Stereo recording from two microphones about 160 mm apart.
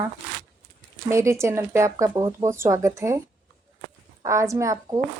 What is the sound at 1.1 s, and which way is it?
A woman's voice, 20° right (ahead or behind).